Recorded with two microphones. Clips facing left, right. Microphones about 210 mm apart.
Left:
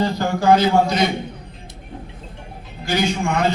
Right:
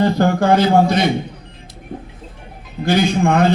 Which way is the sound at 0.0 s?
55° right (ahead or behind).